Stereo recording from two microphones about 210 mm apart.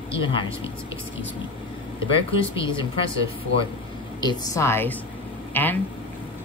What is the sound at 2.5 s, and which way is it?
Speech, 25° left (ahead or behind).